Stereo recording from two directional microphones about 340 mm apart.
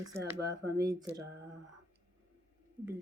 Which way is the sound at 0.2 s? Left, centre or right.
Right.